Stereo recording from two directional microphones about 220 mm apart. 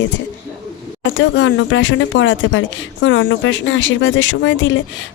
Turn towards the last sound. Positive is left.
turn(degrees=60)  # may be behind; listen again after turning